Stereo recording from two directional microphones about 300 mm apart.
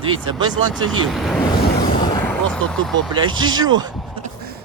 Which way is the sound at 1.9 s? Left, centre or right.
Centre.